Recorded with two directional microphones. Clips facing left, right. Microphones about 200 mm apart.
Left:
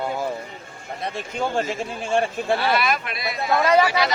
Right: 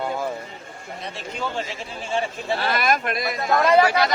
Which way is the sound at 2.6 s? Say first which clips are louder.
Even; 45° right (ahead or behind).